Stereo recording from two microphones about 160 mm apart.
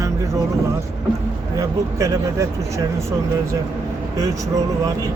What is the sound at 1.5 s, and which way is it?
Speech, 20° right (ahead or behind).